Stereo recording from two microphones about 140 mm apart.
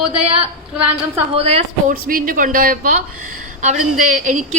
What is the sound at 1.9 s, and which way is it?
A woman's voice, 85° right.